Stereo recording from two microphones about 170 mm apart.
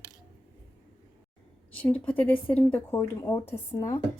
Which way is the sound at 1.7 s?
10° left (ahead or behind).